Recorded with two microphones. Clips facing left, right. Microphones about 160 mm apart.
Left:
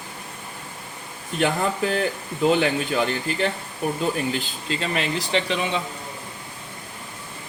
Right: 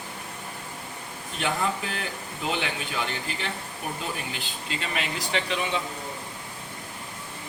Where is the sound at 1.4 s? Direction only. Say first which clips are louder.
Left 6 dB; 40° left (ahead or behind).